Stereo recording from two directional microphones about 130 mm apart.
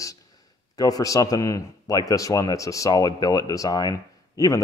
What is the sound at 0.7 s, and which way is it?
A man's voice, 30° left (ahead or behind).